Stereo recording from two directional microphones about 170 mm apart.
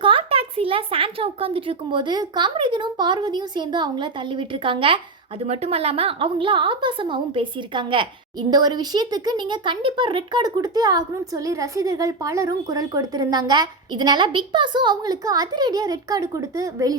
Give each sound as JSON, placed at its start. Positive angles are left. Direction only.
{"t": 0.0, "sound": "a woman's voice", "side_deg": -30}